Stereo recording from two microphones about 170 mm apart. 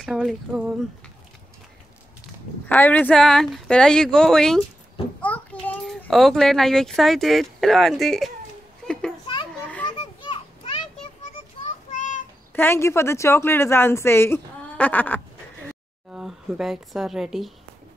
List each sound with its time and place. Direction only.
0.0 s speech: centre (ahead or behind)
2.7 s a child's voice: 10° left (ahead or behind)
9.6 s children playing: 10° left (ahead or behind)
9.9 s children playing: 30° left (ahead or behind)
11.9 s child singing: 50° left (ahead or behind)
12.5 s speech: 15° left (ahead or behind)
16.1 s speech: 5° right (ahead or behind)